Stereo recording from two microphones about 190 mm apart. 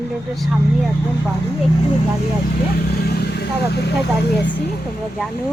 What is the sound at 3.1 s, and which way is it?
Vehicle, 55° left (ahead or behind).